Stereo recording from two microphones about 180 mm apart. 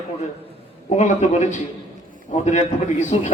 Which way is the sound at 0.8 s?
40° left (ahead or behind).